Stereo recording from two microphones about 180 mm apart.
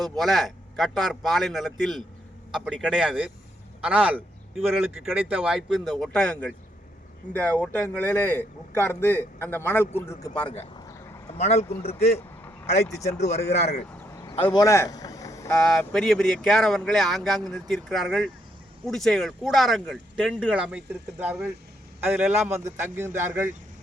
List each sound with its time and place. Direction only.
0.0 s a man's voice: centre (ahead or behind)
10.8 s a sound: 20° left (ahead or behind)
11.3 s speech: 35° left (ahead or behind)
14.1 s a sound: 15° left (ahead or behind)
14.5 s speech: 20° left (ahead or behind)
15.5 s speech: 5° left (ahead or behind)
22.5 s a man's voice: 15° right (ahead or behind)